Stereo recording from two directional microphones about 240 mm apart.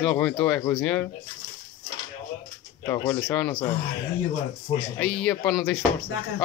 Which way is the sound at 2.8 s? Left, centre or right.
Centre.